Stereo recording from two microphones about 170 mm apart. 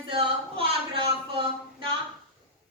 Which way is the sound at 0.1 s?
30° right (ahead or behind).